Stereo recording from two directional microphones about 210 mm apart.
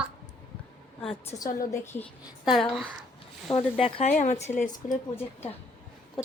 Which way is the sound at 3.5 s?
25° left (ahead or behind).